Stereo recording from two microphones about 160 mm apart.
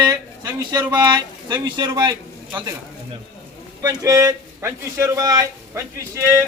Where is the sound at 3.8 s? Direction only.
20° right (ahead or behind).